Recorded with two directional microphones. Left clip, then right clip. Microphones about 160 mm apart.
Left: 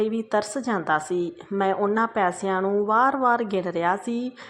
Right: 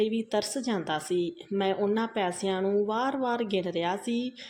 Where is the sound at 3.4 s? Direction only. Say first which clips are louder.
Left 3 dB; 45° left (ahead or behind).